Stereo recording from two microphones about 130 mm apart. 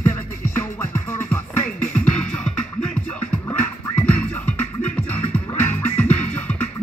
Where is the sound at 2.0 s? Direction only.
10° left (ahead or behind).